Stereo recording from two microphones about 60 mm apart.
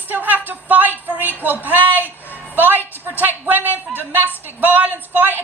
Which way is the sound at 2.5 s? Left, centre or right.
Right.